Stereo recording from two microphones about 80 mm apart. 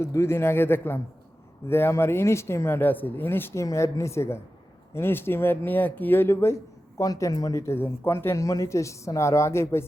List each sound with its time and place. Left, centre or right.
0.0 s speech: left
7.0 s speech: left
7.6 s speech: left